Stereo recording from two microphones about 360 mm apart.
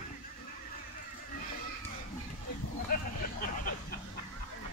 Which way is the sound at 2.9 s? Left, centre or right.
Left.